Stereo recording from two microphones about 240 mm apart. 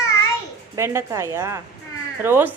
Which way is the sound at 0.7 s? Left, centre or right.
Centre.